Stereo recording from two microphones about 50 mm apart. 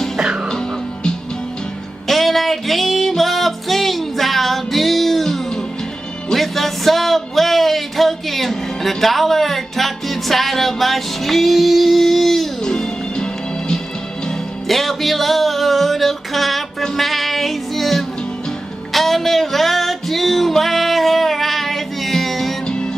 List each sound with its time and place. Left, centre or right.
2.0 s music: centre
12.6 s music: centre